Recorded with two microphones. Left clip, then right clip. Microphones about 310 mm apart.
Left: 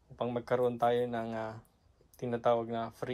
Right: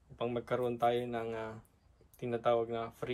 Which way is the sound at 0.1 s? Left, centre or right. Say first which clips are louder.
Left 2 dB; centre.